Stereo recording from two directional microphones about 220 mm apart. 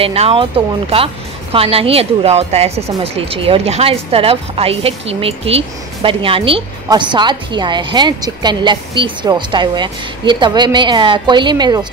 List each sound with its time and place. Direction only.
0.0 s a woman's voice: 25° right (ahead or behind)